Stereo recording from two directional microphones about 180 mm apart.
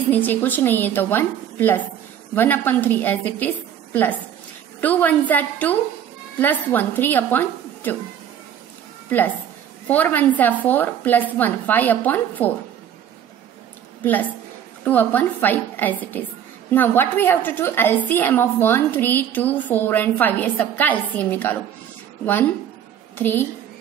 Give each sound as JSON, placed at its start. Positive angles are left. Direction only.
{"t": 0.1, "sound": "a woman's voice", "side_deg": 10}
{"t": 9.8, "sound": "a woman's voice", "side_deg": 10}
{"t": 14.9, "sound": "a woman's voice", "side_deg": 10}